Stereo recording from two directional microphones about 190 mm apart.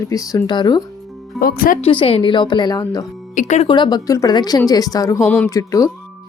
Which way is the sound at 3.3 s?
40° left (ahead or behind).